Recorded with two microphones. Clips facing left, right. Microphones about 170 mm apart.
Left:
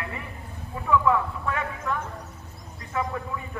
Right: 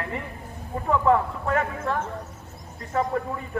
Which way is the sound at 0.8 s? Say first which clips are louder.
Right 1 dB; 45° right (ahead or behind).